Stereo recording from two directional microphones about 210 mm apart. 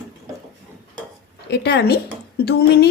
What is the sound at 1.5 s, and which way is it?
Speech, 50° left (ahead or behind).